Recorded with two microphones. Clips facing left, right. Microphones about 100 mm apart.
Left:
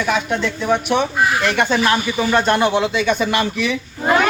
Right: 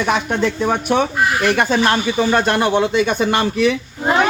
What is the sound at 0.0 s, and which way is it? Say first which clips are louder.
Speech: right 2 dB; 40° right (ahead or behind).